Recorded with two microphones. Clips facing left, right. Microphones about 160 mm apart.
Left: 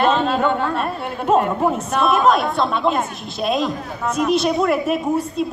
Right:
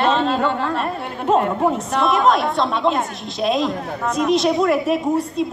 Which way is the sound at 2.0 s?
20° right (ahead or behind).